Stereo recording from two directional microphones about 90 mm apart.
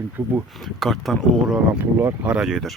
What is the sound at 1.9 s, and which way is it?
Speech, 15° right (ahead or behind).